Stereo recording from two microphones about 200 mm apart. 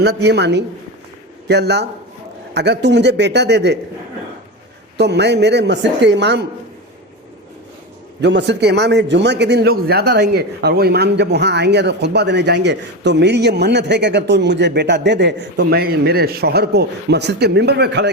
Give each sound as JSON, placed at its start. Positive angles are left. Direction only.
{"t": 0.0, "sound": "a man's voice", "side_deg": -55}
{"t": 4.9, "sound": "a man's voice", "side_deg": -55}
{"t": 8.2, "sound": "a man's voice", "side_deg": -60}